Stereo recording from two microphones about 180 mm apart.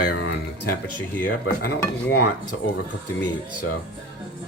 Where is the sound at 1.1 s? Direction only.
55° left (ahead or behind).